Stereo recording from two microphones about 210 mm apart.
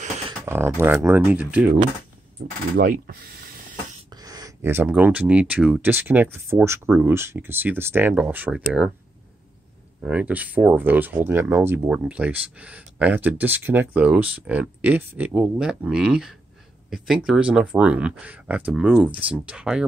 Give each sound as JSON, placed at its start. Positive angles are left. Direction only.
{"t": 0.5, "sound": "speech", "side_deg": -10}
{"t": 2.8, "sound": "speech", "side_deg": -45}
{"t": 4.1, "sound": "speech", "side_deg": -15}
{"t": 10.0, "sound": "speech", "side_deg": -5}